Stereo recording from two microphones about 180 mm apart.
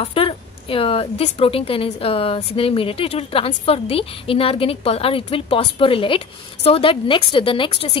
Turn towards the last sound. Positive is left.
turn(degrees=30)  # may be behind; listen again after turning